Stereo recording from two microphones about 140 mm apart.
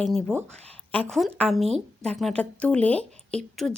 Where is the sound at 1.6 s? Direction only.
50° right (ahead or behind).